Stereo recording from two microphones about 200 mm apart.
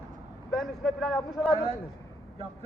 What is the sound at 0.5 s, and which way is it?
Speech, centre (ahead or behind).